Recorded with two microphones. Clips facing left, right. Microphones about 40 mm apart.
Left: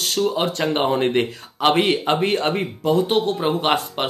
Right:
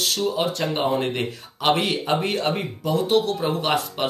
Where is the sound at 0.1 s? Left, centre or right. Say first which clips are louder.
Left 2 dB; left.